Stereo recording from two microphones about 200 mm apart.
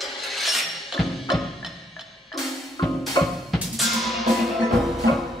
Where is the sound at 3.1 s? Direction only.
Centre (ahead or behind).